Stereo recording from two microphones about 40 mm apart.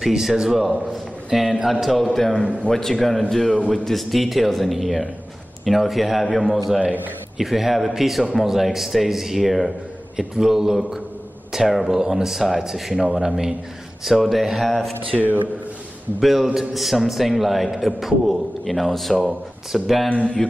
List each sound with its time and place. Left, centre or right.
0.0 s a man's voice: centre
14.0 s a man's voice: centre
15.0 s speech: right
16.2 s a man's voice: centre
19.1 s a man's voice: centre
20.1 s speech: left